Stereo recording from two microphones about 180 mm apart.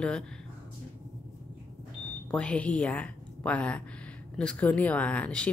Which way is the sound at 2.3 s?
5° left (ahead or behind).